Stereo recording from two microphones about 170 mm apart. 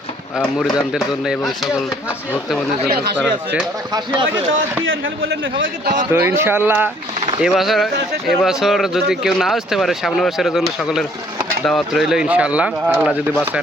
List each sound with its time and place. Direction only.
0.9 s speech: 5° right (ahead or behind)
3.9 s speech: 25° right (ahead or behind)
5.3 s a man's voice: 90° right
6.1 s speech: 15° right (ahead or behind)
7.4 s speech: centre (ahead or behind)